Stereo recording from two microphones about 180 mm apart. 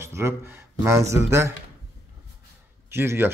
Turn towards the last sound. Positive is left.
turn(degrees=-15)  # may be behind; listen again after turning